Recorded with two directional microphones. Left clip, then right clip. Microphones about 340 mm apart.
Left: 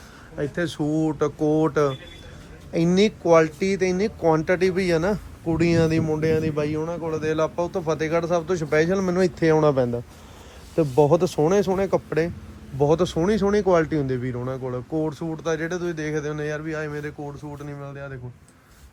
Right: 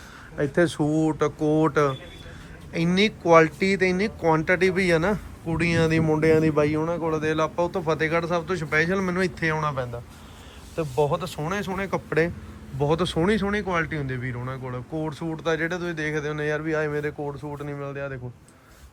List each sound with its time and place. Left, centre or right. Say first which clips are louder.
0.3 s speech: right 4 dB; centre